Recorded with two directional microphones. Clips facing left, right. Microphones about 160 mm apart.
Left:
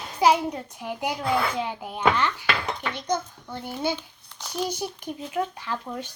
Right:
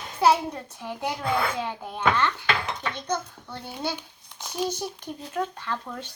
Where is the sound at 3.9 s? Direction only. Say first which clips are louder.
Even; 10° right (ahead or behind).